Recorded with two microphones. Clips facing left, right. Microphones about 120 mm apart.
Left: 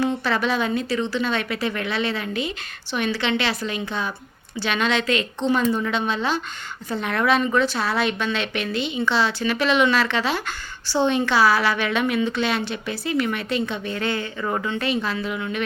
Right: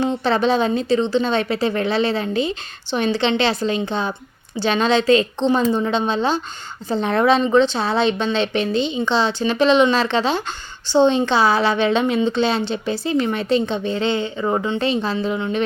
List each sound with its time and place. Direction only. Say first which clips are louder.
0.0 s a woman's voice: right 4 dB; 25° right (ahead or behind)